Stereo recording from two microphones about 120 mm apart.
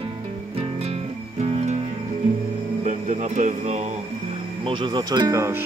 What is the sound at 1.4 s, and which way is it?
Music, 65° right (ahead or behind).